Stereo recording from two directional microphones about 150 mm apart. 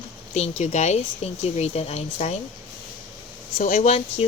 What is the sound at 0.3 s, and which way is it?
Speech, 45° left (ahead or behind).